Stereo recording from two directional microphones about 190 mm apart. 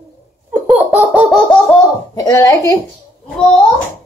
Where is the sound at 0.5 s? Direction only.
10° right (ahead or behind).